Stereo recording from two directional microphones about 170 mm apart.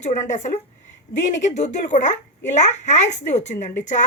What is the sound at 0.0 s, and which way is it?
A woman's voice, 45° left (ahead or behind).